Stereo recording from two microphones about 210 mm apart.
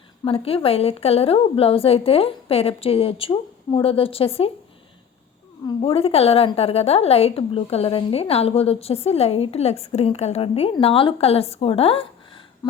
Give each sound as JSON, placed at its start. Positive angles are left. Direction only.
{"t": 0.3, "sound": "a woman's voice", "side_deg": 25}
{"t": 5.6, "sound": "a woman's voice", "side_deg": 25}